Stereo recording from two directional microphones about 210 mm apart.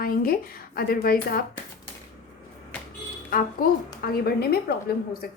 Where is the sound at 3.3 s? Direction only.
45° left (ahead or behind).